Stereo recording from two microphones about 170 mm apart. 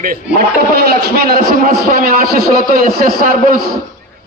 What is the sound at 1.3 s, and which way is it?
A man's voice, 60° right (ahead or behind).